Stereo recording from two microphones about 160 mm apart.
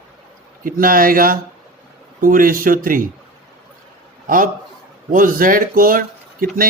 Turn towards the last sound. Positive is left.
turn(degrees=-60)  # may be behind; listen again after turning